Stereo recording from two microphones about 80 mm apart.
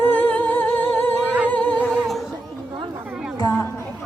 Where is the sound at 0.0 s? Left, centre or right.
Left.